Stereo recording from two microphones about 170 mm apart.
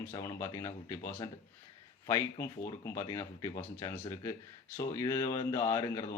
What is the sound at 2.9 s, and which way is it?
Speech, 20° left (ahead or behind).